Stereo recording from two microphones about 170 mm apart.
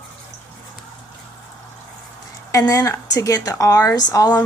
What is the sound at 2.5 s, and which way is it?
A woman's voice, 20° left (ahead or behind).